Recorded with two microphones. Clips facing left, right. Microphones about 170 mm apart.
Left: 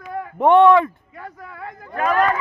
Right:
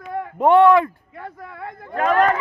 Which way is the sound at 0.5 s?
20° left (ahead or behind).